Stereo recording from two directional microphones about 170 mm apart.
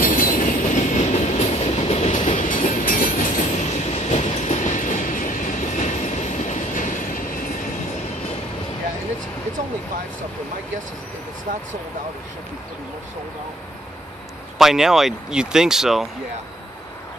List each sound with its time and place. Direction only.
0.0 s train: 55° left (ahead or behind)
14.6 s speech: centre (ahead or behind)